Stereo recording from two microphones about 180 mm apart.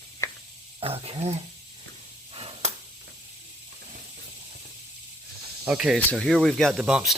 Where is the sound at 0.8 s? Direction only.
30° right (ahead or behind).